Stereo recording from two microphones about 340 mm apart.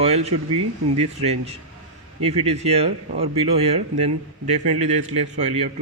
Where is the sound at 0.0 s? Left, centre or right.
Centre.